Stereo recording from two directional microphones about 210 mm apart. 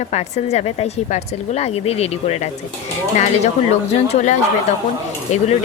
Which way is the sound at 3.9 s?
30° left (ahead or behind).